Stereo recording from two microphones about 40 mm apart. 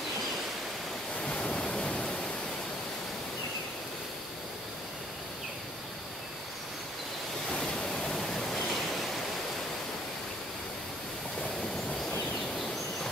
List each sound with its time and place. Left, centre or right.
1.2 s waves: left
7.5 s waterfall: centre
8.7 s waves: centre
12.5 s a sound: centre